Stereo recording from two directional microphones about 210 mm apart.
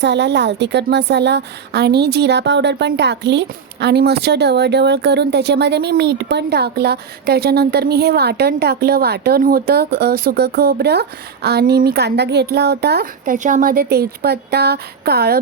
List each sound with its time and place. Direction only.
0.0 s a woman's voice: 55° right (ahead or behind)